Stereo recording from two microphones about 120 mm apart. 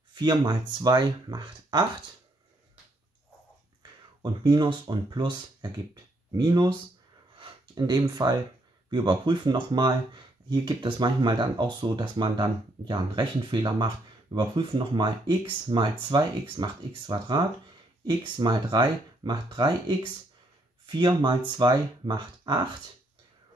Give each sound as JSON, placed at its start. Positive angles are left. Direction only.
{"t": 0.1, "sound": "speech", "side_deg": -35}
{"t": 4.2, "sound": "speech", "side_deg": -35}
{"t": 7.3, "sound": "a sound", "side_deg": -40}
{"t": 8.1, "sound": "speech", "side_deg": -35}